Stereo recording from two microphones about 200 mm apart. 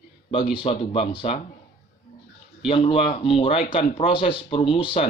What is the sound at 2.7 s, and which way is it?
Speech, 25° left (ahead or behind).